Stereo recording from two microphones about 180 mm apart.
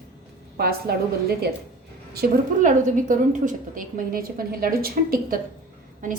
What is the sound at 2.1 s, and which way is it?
A woman's voice, 50° right (ahead or behind).